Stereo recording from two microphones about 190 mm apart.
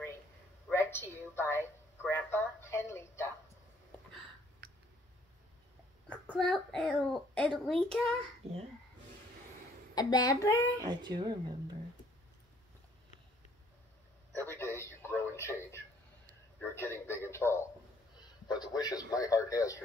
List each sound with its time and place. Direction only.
0.7 s a sound: 10° left (ahead or behind)
6.0 s a child's voice: 5° left (ahead or behind)
8.4 s speech: 30° right (ahead or behind)
9.9 s a man's voice: 20° left (ahead or behind)
10.8 s speech: 25° right (ahead or behind)
14.3 s a sound: 10° left (ahead or behind)
16.5 s a man's voice: 10° left (ahead or behind)